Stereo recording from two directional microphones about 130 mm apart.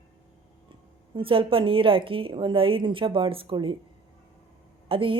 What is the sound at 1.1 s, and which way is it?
A woman's voice, 45° right (ahead or behind).